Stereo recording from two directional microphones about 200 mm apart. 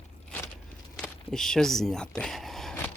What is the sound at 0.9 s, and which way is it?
Speech, centre (ahead or behind).